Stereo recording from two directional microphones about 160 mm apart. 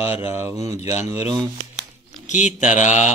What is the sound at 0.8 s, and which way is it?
Speech, 20° right (ahead or behind).